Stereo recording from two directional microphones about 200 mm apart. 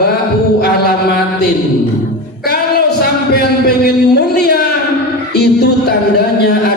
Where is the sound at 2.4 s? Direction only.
55° left (ahead or behind).